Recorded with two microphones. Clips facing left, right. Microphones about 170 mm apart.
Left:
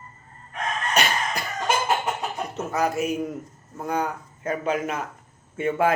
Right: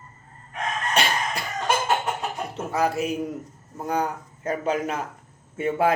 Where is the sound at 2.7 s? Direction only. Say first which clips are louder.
Even; 30° right (ahead or behind).